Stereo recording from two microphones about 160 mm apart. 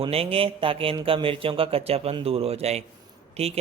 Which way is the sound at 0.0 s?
35° right (ahead or behind).